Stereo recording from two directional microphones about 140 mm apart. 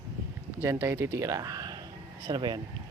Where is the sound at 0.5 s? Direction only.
20° right (ahead or behind).